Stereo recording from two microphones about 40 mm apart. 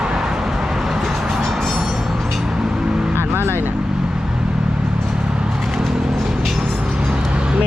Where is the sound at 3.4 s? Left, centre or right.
Right.